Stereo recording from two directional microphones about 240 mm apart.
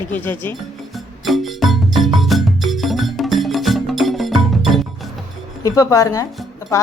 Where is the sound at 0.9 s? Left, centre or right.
Centre.